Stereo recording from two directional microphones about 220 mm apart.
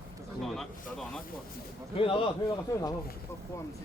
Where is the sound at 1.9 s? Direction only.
25° left (ahead or behind).